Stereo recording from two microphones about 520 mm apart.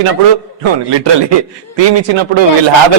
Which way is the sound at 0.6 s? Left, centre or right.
Right.